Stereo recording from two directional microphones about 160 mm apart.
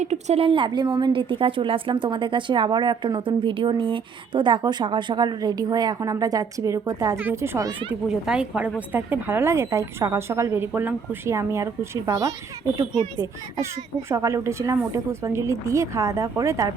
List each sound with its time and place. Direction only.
0.0 s a woman's voice: 45° right (ahead or behind); by 7.7 s 15° right (ahead or behind)
8.0 s a woman's voice: 5° right (ahead or behind); by 12.3 s 20° right (ahead or behind)
14.1 s a woman's voice: 20° right (ahead or behind)